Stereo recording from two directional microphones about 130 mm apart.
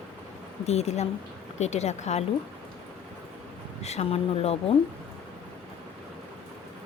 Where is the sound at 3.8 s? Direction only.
55° left (ahead or behind).